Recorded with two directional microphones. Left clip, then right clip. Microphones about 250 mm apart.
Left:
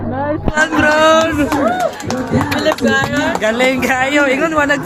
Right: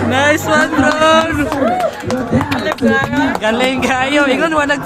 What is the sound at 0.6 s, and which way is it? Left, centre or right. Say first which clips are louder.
Speech: left 1 dB; centre.